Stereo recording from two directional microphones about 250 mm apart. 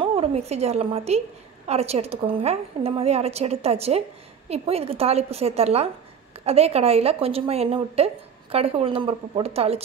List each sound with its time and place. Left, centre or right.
0.0 s a woman's voice: right